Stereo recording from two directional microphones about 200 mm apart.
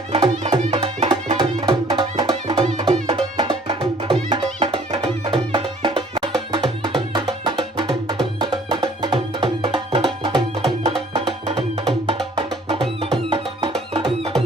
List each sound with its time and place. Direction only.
0.1 s music: 30° right (ahead or behind)
12.6 s music: 30° right (ahead or behind)